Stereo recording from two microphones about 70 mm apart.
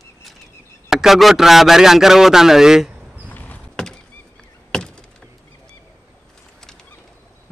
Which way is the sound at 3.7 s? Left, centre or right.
Centre.